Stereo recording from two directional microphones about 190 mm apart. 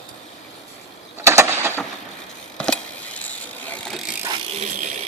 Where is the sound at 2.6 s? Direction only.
5° left (ahead or behind).